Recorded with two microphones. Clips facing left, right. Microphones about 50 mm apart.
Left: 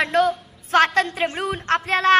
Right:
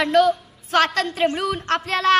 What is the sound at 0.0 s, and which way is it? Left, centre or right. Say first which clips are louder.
A woman's voice: right 2 dB; left.